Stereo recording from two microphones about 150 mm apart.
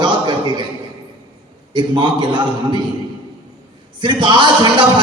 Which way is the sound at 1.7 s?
30° right (ahead or behind).